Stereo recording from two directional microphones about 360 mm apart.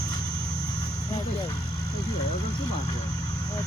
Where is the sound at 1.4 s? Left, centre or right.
Centre.